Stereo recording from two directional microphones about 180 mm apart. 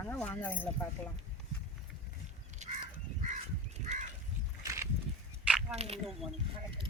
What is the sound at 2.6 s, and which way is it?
Crow, 40° right (ahead or behind).